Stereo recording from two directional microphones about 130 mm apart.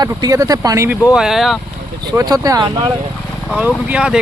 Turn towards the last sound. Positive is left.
turn(degrees=-10)  # may be behind; listen again after turning